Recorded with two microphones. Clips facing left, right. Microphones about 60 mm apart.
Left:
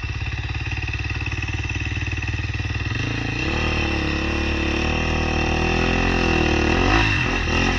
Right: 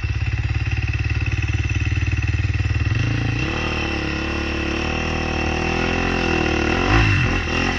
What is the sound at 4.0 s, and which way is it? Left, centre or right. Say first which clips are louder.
Vehicle: even; right.